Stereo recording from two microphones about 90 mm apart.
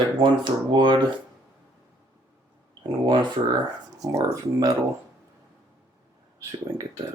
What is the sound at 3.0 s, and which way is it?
Speech, 65° right (ahead or behind).